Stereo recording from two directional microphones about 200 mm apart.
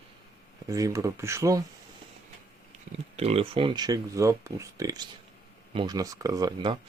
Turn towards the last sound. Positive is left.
turn(degrees=-20)  # may be behind; listen again after turning